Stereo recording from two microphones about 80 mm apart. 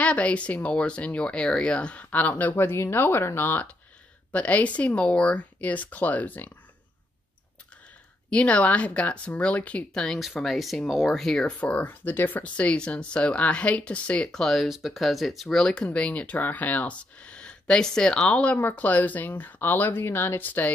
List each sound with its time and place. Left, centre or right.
0.0 s speech: centre
8.3 s speech: centre
10.0 s speech: centre
11.6 s speech: centre
14.4 s speech: centre
15.6 s speech: centre